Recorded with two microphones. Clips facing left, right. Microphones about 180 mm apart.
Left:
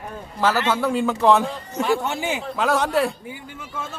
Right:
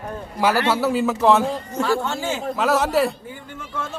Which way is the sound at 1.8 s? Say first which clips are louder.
Left 1 dB; 15° left (ahead or behind).